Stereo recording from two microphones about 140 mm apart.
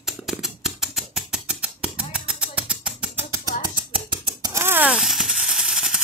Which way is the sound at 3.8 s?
35° right (ahead or behind).